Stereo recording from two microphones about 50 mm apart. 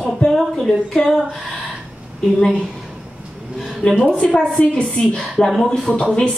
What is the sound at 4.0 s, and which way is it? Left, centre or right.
Speech, centre.